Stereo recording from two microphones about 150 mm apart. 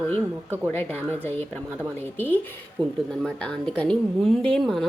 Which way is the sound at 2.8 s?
30° right (ahead or behind).